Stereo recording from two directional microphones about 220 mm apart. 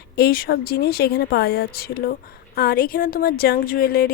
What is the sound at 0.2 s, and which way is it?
A woman's voice, 45° left (ahead or behind).